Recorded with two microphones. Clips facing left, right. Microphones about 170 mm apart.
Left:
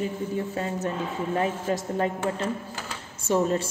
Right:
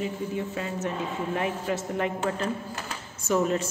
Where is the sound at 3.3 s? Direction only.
30° left (ahead or behind).